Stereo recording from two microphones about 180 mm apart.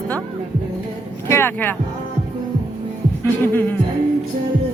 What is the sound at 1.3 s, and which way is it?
Speech, 10° left (ahead or behind).